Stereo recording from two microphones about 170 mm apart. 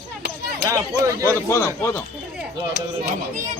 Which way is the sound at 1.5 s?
15° left (ahead or behind).